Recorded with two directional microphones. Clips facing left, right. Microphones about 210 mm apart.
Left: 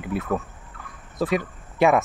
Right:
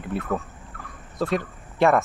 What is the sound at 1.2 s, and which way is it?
Speech, 5° left (ahead or behind).